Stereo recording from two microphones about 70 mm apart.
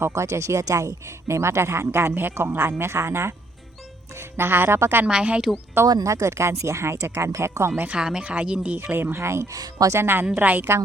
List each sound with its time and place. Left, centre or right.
0.0 s speech: right
5.0 s speech: centre
6.0 s speech: right
7.9 s speech: centre; by 9.6 s right
9.6 s speech: right
9.9 s speech: right